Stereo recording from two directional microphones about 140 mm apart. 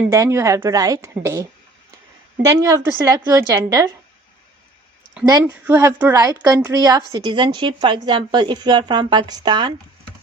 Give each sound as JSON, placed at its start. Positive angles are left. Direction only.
{"t": 0.0, "sound": "a woman's voice", "side_deg": -20}
{"t": 2.6, "sound": "a woman's voice", "side_deg": -20}
{"t": 5.3, "sound": "a woman's voice", "side_deg": -15}